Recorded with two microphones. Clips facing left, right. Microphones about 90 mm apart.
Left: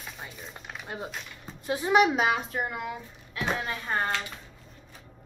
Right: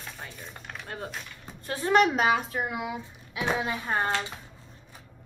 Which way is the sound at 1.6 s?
15° left (ahead or behind).